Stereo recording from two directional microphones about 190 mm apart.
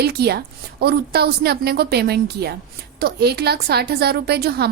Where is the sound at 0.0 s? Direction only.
55° right (ahead or behind).